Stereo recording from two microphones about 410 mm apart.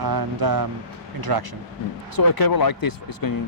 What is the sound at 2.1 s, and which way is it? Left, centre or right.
Speech, left.